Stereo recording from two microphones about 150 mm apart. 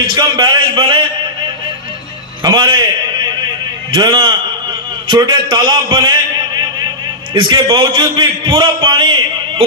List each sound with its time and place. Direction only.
0.1 s a man's voice: 30° right (ahead or behind)
2.4 s a man's voice: 30° right (ahead or behind)
7.3 s a man's voice: 30° right (ahead or behind)